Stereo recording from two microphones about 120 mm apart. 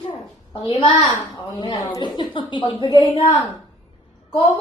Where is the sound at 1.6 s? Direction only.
40° left (ahead or behind).